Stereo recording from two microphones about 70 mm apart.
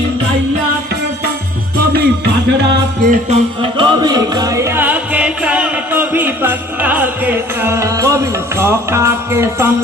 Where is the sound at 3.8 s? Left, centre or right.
Right.